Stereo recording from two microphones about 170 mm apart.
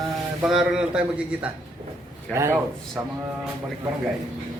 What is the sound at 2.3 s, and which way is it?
Speech, 15° right (ahead or behind).